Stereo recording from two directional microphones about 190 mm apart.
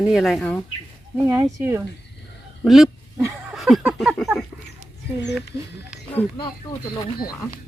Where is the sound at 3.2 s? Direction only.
15° right (ahead or behind).